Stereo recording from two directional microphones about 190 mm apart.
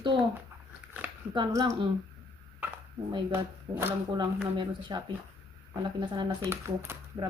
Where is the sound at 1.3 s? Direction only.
20° right (ahead or behind).